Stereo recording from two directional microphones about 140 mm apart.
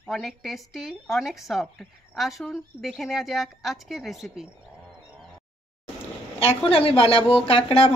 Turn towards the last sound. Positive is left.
turn(degrees=40)  # may be behind; listen again after turning